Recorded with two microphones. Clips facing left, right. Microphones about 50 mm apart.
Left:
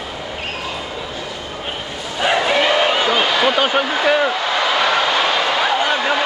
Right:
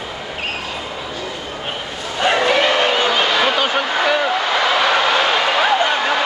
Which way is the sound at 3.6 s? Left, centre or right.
Centre.